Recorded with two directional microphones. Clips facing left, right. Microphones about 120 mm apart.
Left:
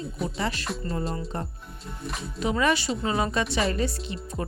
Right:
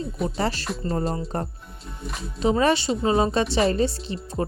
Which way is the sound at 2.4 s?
30° right (ahead or behind).